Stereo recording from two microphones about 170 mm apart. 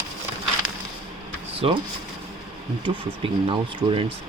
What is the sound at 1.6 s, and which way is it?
Speech, 35° right (ahead or behind).